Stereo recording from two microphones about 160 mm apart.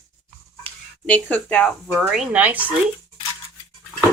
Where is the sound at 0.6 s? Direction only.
10° left (ahead or behind); by 2.7 s 10° right (ahead or behind).